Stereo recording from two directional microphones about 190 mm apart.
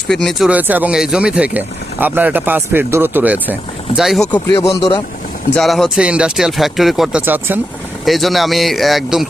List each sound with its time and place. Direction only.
0.1 s speech: centre (ahead or behind)
4.7 s speech: 30° left (ahead or behind)
5.5 s speech: centre (ahead or behind)